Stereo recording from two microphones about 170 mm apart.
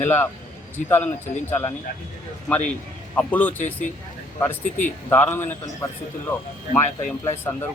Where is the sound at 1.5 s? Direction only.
10° left (ahead or behind).